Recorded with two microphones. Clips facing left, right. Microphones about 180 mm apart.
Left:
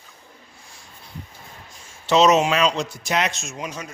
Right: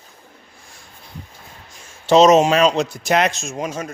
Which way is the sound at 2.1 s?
45° right (ahead or behind).